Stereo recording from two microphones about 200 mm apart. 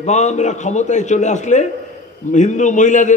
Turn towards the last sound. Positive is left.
turn(degrees=40)  # may be behind; listen again after turning